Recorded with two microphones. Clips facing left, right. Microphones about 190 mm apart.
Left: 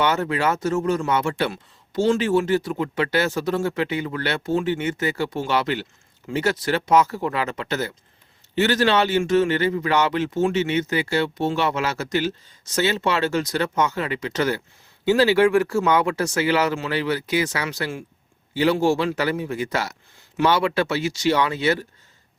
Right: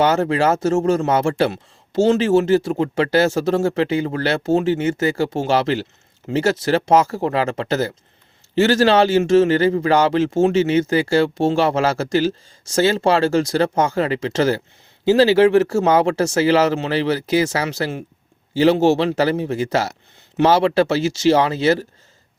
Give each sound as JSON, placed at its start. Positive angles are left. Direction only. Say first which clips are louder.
{"t": 0.0, "sound": "a man's voice", "louder": "right 5 dB", "side_deg": -30}